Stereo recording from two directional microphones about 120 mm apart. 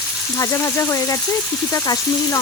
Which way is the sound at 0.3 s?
25° left (ahead or behind).